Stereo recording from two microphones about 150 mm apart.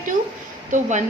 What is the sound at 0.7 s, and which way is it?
Speech, 55° right (ahead or behind).